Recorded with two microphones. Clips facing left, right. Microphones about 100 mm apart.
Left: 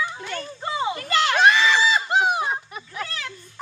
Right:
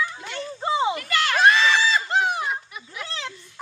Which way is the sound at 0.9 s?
25° left (ahead or behind).